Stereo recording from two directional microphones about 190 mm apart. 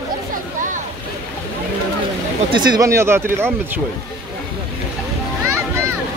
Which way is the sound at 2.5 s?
20° right (ahead or behind).